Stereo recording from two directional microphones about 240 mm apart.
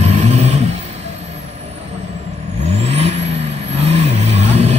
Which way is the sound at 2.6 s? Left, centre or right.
Right.